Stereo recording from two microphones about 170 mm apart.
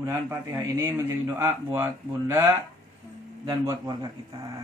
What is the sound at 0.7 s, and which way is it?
Speech, 15° right (ahead or behind).